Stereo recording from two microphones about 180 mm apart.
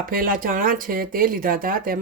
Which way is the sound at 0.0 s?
50° right (ahead or behind).